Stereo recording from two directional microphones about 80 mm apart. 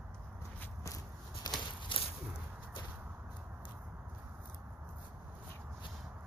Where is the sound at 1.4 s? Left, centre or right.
Left.